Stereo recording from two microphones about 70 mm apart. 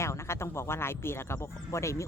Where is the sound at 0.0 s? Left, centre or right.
Left.